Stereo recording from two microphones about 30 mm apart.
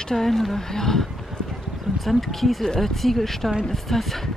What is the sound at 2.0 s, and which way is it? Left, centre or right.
Speech, centre.